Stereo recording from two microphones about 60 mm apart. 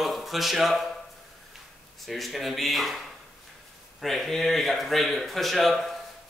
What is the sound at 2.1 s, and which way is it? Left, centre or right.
Speech, centre.